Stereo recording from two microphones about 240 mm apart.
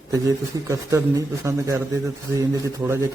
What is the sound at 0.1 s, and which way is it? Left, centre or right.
A man's voice, centre.